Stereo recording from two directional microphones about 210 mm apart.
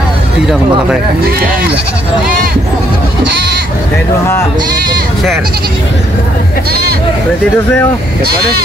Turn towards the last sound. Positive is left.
turn(degrees=-50)  # may be behind; listen again after turning